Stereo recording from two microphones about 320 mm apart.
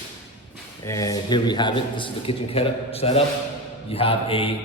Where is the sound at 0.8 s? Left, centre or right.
Centre.